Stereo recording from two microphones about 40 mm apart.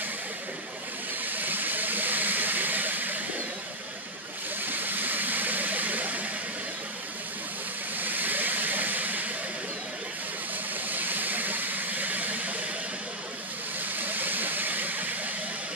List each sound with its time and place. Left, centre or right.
1.2 s vehicle: right
4.6 s vehicle: right
8.0 s vehicle: right
10.9 s vehicle: right
13.9 s vehicle: right